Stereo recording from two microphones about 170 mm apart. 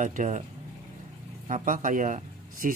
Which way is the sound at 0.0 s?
50° right (ahead or behind).